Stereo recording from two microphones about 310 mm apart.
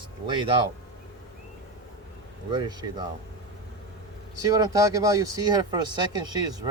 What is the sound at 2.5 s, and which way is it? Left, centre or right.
Speech, centre.